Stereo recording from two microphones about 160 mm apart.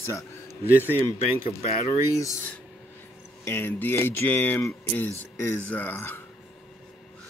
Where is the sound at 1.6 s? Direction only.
45° left (ahead or behind).